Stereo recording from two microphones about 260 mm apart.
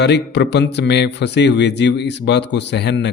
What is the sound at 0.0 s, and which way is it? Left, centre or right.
Speech, left.